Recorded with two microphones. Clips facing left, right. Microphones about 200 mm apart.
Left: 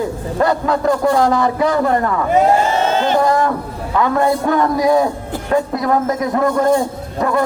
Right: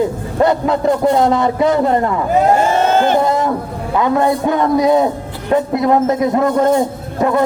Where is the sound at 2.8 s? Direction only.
50° right (ahead or behind).